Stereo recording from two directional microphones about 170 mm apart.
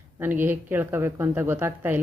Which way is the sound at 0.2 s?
10° right (ahead or behind).